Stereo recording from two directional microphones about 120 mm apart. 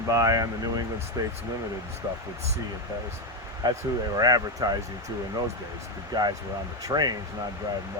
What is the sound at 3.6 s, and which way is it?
Speech, 35° right (ahead or behind).